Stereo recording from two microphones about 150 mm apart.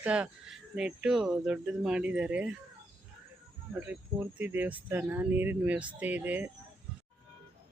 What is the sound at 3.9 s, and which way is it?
Speech, 10° right (ahead or behind).